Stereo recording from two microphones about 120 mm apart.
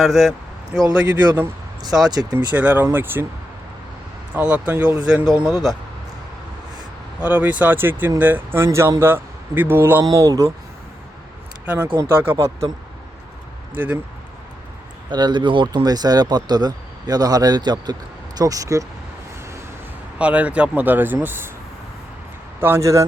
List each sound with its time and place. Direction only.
0.0 s speech: centre (ahead or behind)
2.0 s speech: 35° right (ahead or behind)
2.6 s speech: 15° right (ahead or behind)
4.4 s speech: 10° right (ahead or behind)
5.0 s speech: 5° right (ahead or behind)
7.2 s speech: 10° right (ahead or behind)
11.6 s speech: 10° right (ahead or behind)
13.7 s speech: 15° right (ahead or behind)
15.1 s speech: 40° right (ahead or behind)
20.1 s speech: 10° right (ahead or behind)
22.6 s speech: 20° right (ahead or behind)